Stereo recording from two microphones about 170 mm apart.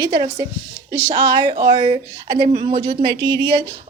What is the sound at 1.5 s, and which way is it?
A woman's voice, 20° right (ahead or behind).